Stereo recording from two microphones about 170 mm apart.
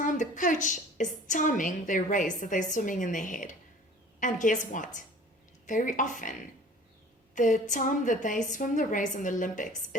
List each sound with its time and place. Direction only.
0.0 s a woman's voice: 50° left (ahead or behind)
7.3 s a woman's voice: 50° left (ahead or behind)